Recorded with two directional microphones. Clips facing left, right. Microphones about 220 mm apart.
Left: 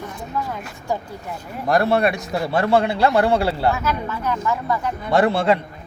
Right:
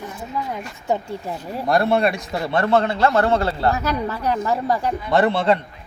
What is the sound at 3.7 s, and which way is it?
A woman's voice, 35° right (ahead or behind).